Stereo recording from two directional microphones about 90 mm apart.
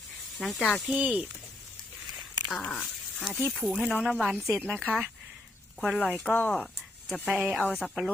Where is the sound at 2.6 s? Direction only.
15° left (ahead or behind).